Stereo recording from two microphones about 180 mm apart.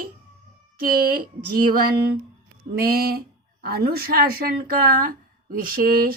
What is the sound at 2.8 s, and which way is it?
Speech, 55° right (ahead or behind).